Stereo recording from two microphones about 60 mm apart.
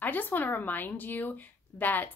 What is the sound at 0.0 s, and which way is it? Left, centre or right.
A woman's voice, left.